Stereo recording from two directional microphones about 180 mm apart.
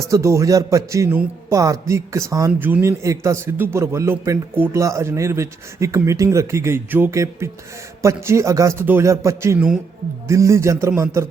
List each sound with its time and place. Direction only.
0.0 s a man's voice: 15° right (ahead or behind)